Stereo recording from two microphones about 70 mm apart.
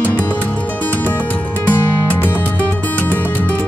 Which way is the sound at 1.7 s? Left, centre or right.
Left.